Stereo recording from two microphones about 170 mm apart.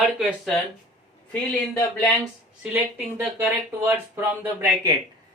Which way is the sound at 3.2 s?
10° right (ahead or behind).